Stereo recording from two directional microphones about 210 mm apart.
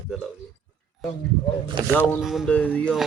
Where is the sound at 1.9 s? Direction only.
10° left (ahead or behind).